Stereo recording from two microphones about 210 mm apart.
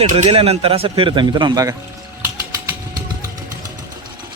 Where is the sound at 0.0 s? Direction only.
30° right (ahead or behind).